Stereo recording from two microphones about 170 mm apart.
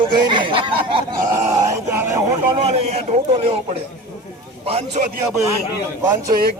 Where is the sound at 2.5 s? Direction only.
40° right (ahead or behind).